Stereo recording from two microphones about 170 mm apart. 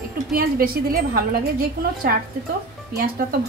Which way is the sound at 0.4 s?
60° right (ahead or behind).